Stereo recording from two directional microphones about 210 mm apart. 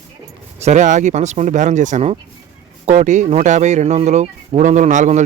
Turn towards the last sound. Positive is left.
turn(degrees=-35)  # may be behind; listen again after turning